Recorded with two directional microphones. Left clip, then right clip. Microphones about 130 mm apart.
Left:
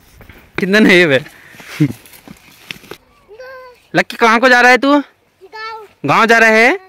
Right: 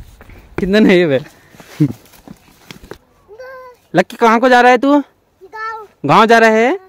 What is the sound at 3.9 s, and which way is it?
Speech, 25° right (ahead or behind).